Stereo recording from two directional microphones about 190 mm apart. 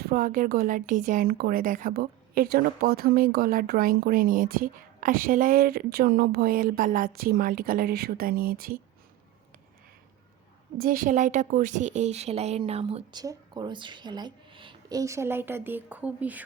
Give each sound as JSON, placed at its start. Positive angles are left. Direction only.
{"t": 0.0, "sound": "speech", "side_deg": -50}
{"t": 10.8, "sound": "a woman's voice", "side_deg": -45}